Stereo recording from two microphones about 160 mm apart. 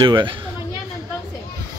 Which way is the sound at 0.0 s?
30° right (ahead or behind).